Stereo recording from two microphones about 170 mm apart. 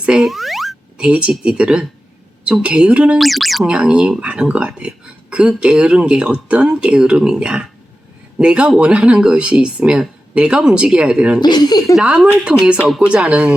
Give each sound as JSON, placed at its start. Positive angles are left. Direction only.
{"t": 0.0, "sound": "speech", "side_deg": -5}
{"t": 11.3, "sound": "speech", "side_deg": 25}
{"t": 11.9, "sound": "speech", "side_deg": -5}